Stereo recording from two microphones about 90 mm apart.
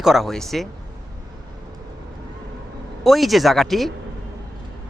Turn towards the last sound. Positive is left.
turn(degrees=0)  # may be behind; listen again after turning